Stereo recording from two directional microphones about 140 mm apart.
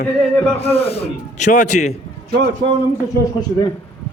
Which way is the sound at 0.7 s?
45° left (ahead or behind).